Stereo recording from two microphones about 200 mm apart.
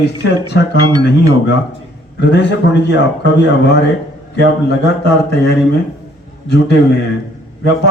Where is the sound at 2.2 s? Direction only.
55° left (ahead or behind).